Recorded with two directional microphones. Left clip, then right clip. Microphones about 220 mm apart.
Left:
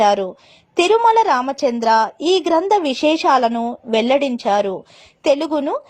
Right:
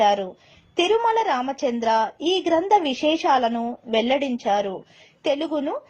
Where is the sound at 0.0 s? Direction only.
50° left (ahead or behind).